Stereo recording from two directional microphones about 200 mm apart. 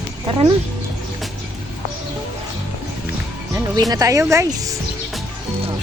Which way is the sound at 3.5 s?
20° right (ahead or behind).